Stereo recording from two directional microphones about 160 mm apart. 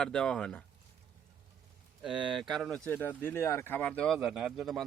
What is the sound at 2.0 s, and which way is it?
Speech, 30° right (ahead or behind).